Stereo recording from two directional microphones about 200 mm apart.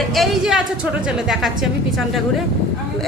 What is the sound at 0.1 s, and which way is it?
A man's voice, centre (ahead or behind).